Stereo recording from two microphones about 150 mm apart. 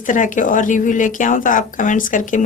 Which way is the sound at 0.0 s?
60° left (ahead or behind).